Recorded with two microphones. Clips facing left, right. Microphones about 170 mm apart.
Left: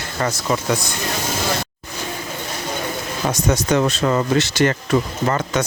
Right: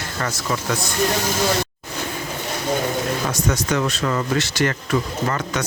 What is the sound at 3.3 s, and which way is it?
Speech, 25° left (ahead or behind).